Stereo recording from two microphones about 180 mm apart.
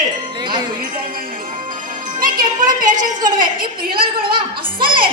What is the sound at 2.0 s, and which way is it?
Speech, 50° right (ahead or behind).